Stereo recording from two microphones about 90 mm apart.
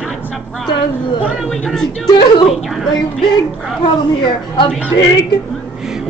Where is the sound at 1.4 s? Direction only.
5° left (ahead or behind).